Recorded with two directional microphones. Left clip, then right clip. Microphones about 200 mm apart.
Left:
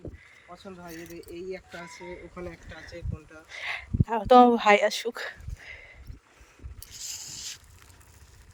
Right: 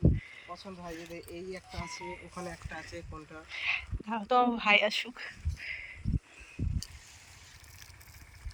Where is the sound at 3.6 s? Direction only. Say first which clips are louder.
Left 1 dB; 35° left (ahead or behind).